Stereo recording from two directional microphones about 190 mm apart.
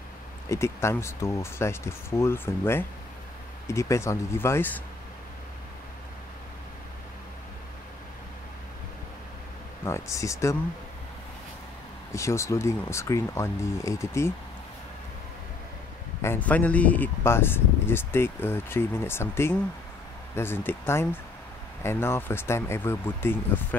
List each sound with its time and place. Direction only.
0.5 s speech: 15° left (ahead or behind)
9.8 s speech: 15° left (ahead or behind)
12.1 s speech: 15° left (ahead or behind)
16.2 s speech: 10° left (ahead or behind)